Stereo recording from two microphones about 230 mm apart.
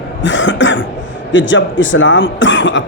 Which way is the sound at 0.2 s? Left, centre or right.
Left.